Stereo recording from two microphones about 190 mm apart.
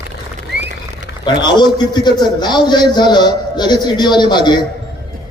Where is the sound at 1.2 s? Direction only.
25° left (ahead or behind).